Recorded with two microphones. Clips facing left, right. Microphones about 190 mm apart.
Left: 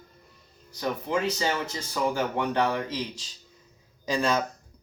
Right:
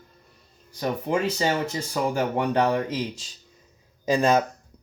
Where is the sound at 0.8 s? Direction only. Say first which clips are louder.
Right 3 dB; 30° right (ahead or behind); by 4.4 s 50° right (ahead or behind).